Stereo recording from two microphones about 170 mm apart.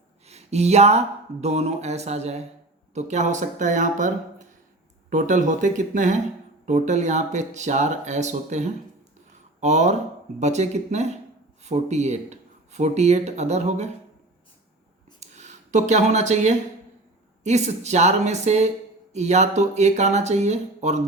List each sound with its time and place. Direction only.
0.3 s speech: 40° right (ahead or behind)
15.2 s a sound: 45° right (ahead or behind)
17.4 s speech: 40° right (ahead or behind)